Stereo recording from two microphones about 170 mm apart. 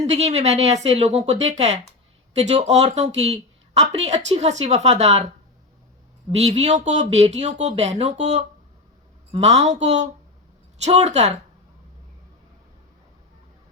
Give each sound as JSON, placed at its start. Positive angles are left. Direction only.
{"t": 0.0, "sound": "speech", "side_deg": -40}
{"t": 6.3, "sound": "speech", "side_deg": -40}